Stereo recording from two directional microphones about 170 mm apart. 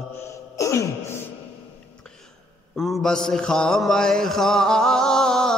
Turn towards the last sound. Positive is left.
turn(degrees=5)  # may be behind; listen again after turning